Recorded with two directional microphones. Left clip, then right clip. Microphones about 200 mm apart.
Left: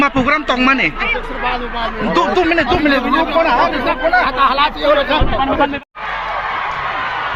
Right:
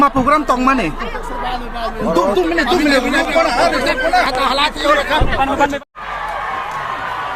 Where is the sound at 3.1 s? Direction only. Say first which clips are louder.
Left 1 dB; 25° left (ahead or behind); by 5.2 s 40° left (ahead or behind).